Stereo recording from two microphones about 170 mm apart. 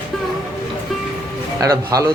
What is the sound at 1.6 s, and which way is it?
Speech, 20° right (ahead or behind).